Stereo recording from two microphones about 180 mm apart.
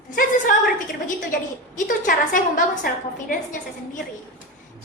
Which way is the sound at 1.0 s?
45° left (ahead or behind).